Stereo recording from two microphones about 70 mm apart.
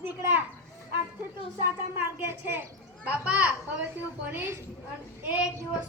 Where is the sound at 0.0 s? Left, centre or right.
Right.